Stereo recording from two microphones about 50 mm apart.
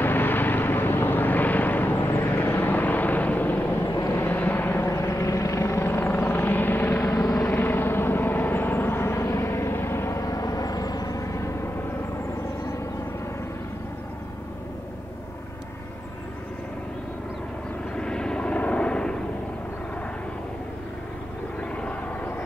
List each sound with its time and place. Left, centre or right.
0.0 s vehicle: left
4.8 s helicopter: left
17.9 s vehicle: centre
21.5 s vehicle: left